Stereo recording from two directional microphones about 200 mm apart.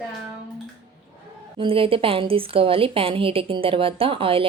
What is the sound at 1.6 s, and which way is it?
A woman's voice, 25° right (ahead or behind).